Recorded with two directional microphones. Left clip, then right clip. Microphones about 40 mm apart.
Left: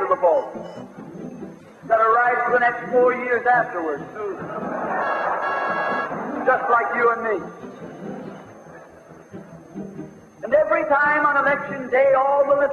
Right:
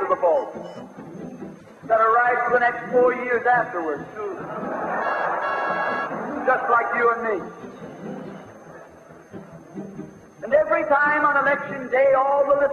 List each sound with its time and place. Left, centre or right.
0.1 s a man's voice: centre
1.9 s a man's voice: centre
4.6 s a sound: centre
5.5 s organ: centre
6.3 s a man's voice: centre
10.4 s a man's voice: centre